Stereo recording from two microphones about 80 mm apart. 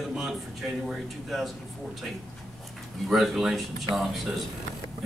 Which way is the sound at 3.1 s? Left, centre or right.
Centre.